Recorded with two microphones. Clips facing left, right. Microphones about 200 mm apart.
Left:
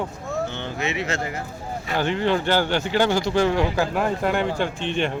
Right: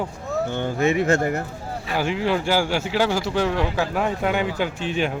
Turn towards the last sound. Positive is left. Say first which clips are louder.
# even
turn(degrees=-5)  # may be behind; listen again after turning